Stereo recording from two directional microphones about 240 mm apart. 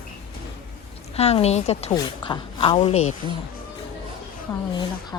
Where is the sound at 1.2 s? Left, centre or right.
Left.